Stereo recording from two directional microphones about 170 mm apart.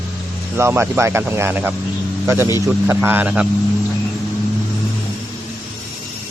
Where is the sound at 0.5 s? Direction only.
15° right (ahead or behind).